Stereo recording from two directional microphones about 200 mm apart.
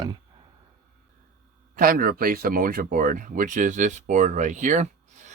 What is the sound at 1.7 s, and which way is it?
Speech, 45° right (ahead or behind).